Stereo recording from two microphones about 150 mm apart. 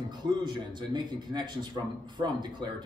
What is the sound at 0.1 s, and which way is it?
A man's voice, 30° right (ahead or behind).